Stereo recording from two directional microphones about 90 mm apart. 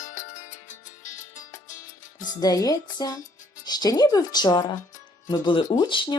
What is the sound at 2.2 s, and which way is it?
Speech, 45° left (ahead or behind).